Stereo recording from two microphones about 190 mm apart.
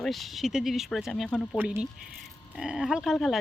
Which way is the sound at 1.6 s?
10° right (ahead or behind).